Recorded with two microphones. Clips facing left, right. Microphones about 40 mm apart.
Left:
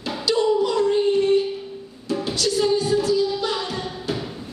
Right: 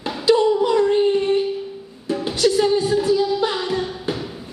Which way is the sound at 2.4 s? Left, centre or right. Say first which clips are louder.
Right 4 dB; right.